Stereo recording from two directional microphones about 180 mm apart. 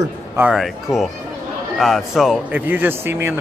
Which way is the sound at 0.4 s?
5° right (ahead or behind).